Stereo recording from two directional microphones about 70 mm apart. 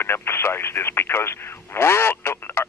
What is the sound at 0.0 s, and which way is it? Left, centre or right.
Speech, left.